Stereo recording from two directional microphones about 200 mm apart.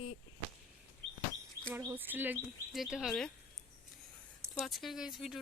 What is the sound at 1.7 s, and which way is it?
Speech, 10° right (ahead or behind).